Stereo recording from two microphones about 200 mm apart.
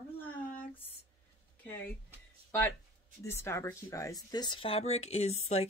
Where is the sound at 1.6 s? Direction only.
10° left (ahead or behind).